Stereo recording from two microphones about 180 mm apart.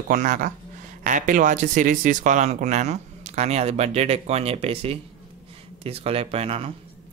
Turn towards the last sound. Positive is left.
turn(degrees=-35)  # may be behind; listen again after turning